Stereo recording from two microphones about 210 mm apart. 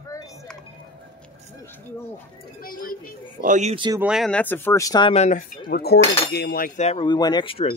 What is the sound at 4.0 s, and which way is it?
Speech, centre (ahead or behind).